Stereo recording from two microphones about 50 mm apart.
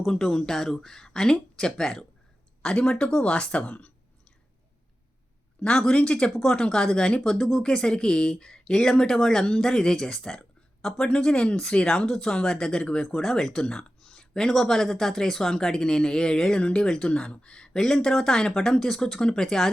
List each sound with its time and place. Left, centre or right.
0.2 s speech: centre; by 3.9 s left
5.6 s speech: centre
12.0 s speech: centre
17.7 s speech: centre